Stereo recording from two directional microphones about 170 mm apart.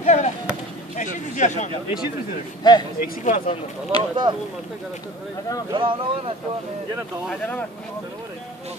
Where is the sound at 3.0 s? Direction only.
50° left (ahead or behind).